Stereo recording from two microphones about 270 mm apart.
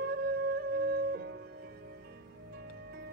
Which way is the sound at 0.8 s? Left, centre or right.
Right.